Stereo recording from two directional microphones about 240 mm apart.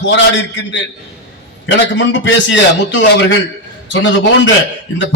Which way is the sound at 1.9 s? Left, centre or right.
Left.